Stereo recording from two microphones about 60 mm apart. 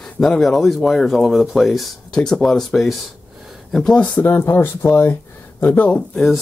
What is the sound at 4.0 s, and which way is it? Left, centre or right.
Speech, left.